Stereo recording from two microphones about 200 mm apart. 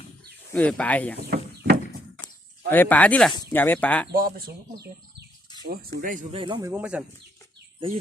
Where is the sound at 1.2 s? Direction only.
50° right (ahead or behind).